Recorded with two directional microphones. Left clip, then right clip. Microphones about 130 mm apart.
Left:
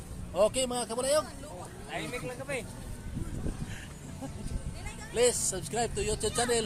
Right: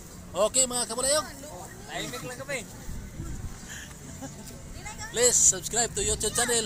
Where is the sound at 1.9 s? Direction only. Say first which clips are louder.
Right 1 dB; 30° left (ahead or behind).